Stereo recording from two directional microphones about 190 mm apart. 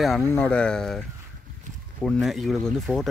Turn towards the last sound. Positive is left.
turn(degrees=0)  # may be behind; listen again after turning